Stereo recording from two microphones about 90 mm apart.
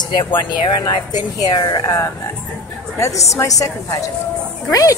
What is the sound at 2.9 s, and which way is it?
Speech, 35° left (ahead or behind).